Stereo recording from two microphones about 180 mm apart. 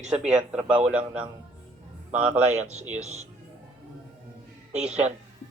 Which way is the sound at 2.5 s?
40° right (ahead or behind).